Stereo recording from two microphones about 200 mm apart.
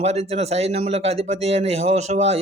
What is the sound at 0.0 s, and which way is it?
Speech, 30° right (ahead or behind).